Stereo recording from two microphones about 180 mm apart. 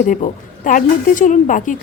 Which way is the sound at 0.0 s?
45° left (ahead or behind).